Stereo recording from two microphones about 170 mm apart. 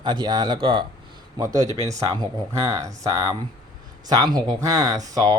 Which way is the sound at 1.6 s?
40° right (ahead or behind).